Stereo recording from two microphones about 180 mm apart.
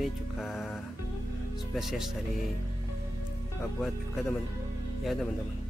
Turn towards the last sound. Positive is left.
turn(degrees=0)  # may be behind; listen again after turning